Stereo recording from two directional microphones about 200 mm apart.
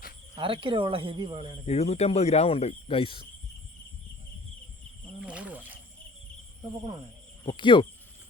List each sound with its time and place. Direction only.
0.3 s speech: 25° right (ahead or behind)
1.6 s speech: 30° left (ahead or behind)
5.2 s wild animals: 5° right (ahead or behind)
7.4 s speech: 25° left (ahead or behind)